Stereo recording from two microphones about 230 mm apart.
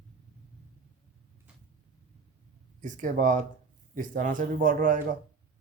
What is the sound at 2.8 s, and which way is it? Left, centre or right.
Speech, right.